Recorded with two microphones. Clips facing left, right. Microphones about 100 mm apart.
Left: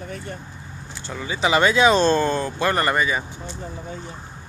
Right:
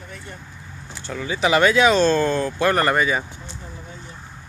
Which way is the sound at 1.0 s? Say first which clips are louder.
Right 1 dB; 15° left (ahead or behind).